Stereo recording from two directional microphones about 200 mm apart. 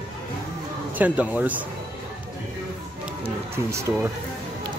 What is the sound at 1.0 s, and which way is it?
Speech, 5° right (ahead or behind).